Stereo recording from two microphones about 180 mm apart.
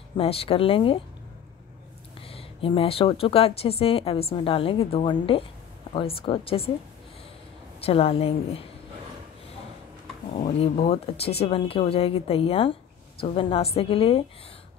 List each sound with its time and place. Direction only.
0.2 s speech: 30° left (ahead or behind)
2.1 s speech: 30° left (ahead or behind)
7.8 s speech: 35° left (ahead or behind)
10.3 s speech: 35° left (ahead or behind)